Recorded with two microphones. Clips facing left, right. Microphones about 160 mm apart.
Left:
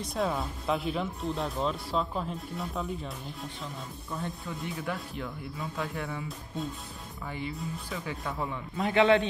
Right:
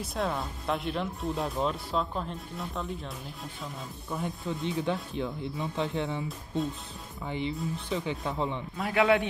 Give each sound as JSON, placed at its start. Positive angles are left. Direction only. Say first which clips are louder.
{"t": 0.0, "sound": "speech", "louder": "left 1 dB", "side_deg": 0}
{"t": 4.1, "sound": "speech", "louder": "right 4 dB", "side_deg": -20}
{"t": 6.2, "sound": "speech", "louder": "right 4 dB", "side_deg": 0}
{"t": 7.2, "sound": "speech", "louder": "right 4 dB", "side_deg": -20}
{"t": 8.7, "sound": "speech", "louder": "left 2 dB", "side_deg": -5}